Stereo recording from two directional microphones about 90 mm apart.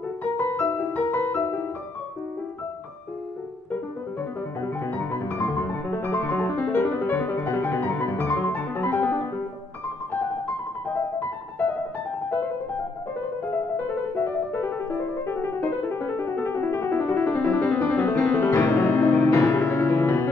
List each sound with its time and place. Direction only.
0.2 s music: 20° left (ahead or behind)
4.6 s music: 25° left (ahead or behind)
8.2 s music: 25° left (ahead or behind)
10.9 s music: 20° left (ahead or behind)
13.5 s music: 20° left (ahead or behind)